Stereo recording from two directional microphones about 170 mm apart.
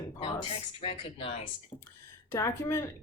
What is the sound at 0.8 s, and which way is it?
Speech, 35° left (ahead or behind).